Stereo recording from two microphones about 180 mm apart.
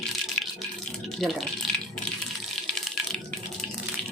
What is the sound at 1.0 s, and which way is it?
Speech, centre (ahead or behind).